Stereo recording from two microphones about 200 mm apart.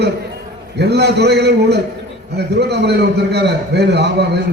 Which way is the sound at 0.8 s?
55° right (ahead or behind).